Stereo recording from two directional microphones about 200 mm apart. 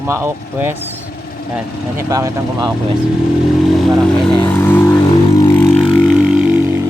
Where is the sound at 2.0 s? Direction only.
15° right (ahead or behind).